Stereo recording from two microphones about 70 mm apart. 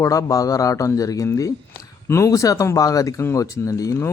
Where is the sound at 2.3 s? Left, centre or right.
Left.